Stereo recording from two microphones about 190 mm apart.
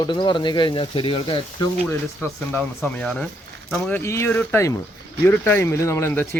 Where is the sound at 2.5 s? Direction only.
10° left (ahead or behind).